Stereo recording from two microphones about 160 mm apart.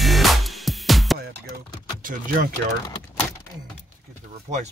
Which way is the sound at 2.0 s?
60° right (ahead or behind).